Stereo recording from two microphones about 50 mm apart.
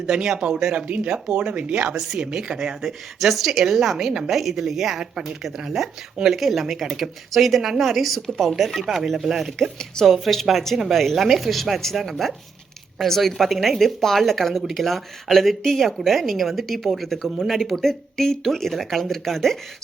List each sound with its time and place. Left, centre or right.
0.0 s speech: centre
0.9 s speech: right
3.2 s speech: centre
9.7 s speech: centre